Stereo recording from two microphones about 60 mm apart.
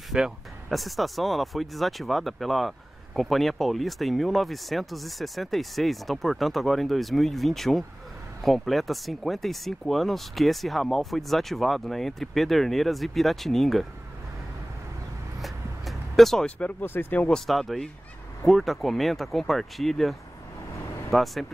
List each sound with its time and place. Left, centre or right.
0.1 s speech: centre
15.4 s vehicle: centre
16.4 s speech: centre
16.8 s speech: left
17.5 s speech: centre